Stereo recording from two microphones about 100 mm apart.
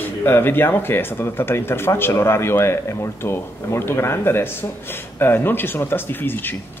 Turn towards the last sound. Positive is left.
turn(degrees=20)  # may be behind; listen again after turning